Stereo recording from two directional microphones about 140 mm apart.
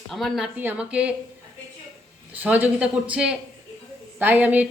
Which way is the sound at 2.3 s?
10° right (ahead or behind).